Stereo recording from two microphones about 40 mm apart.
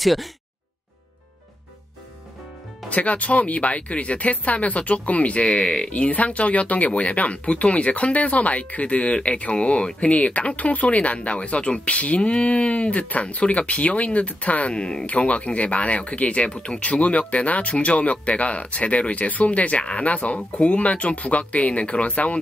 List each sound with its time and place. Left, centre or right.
0.0 s speech: centre
2.9 s speech: left
14.7 s speech: left